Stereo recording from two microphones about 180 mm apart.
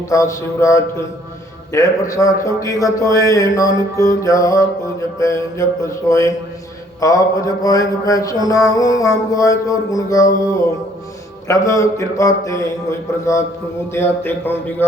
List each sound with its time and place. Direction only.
0.1 s a man's voice: 20° left (ahead or behind)
4.0 s mantra: 20° left (ahead or behind)
5.2 s a man's voice: 15° left (ahead or behind)
7.0 s mantra: 20° left (ahead or behind)
11.4 s a man's voice: 15° left (ahead or behind)